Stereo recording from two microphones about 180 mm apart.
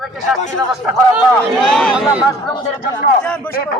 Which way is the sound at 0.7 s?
5° right (ahead or behind).